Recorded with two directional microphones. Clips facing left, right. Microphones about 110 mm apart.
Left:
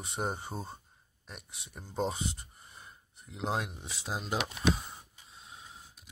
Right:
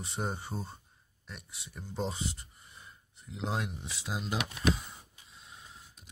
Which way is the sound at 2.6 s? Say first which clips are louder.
Left 1 dB; 35° left (ahead or behind).